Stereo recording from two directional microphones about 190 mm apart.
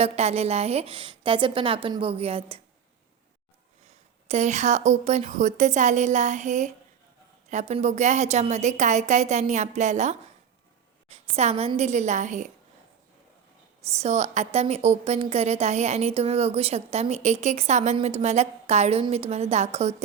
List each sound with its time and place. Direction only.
0.0 s a woman's voice: 35° right (ahead or behind)
3.8 s a woman's voice: 35° right (ahead or behind)
13.9 s a woman's voice: 35° right (ahead or behind)